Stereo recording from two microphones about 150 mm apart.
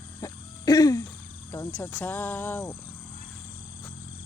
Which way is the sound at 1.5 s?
15° left (ahead or behind).